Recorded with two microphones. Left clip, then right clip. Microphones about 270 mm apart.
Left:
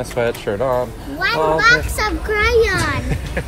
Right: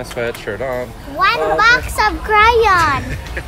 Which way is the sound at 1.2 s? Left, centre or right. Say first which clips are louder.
Right 2 dB; right.